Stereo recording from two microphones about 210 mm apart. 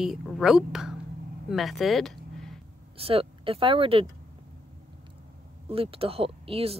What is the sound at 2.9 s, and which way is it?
Speech, 25° right (ahead or behind).